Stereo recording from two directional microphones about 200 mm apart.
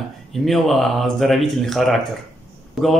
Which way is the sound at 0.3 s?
Centre (ahead or behind).